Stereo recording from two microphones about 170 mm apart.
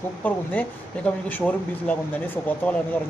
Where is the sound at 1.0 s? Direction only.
10° left (ahead or behind).